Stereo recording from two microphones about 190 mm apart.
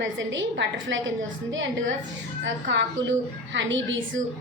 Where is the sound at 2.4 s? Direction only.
70° right (ahead or behind).